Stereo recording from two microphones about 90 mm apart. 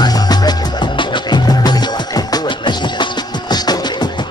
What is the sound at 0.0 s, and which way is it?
Music, 50° left (ahead or behind).